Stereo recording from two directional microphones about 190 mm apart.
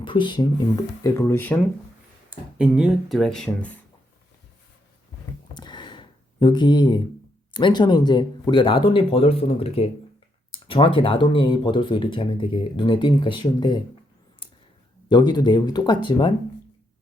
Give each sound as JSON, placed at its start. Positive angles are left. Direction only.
{"t": 0.0, "sound": "speech", "side_deg": 25}
{"t": 1.0, "sound": "speech", "side_deg": 10}
{"t": 2.3, "sound": "speech", "side_deg": -5}
{"t": 5.5, "sound": "a sound", "side_deg": 25}
{"t": 7.5, "sound": "speech", "side_deg": 25}
{"t": 15.1, "sound": "speech", "side_deg": 25}